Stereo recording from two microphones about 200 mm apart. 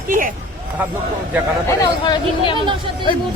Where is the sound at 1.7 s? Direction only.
20° left (ahead or behind).